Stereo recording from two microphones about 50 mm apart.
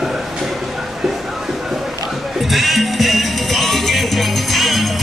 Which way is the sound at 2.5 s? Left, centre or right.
Centre.